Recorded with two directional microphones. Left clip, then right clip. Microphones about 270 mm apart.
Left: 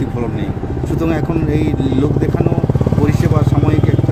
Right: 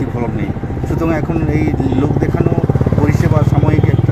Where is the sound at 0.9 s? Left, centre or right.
Centre.